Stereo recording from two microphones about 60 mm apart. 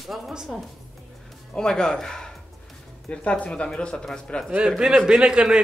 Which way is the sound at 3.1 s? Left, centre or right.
Left.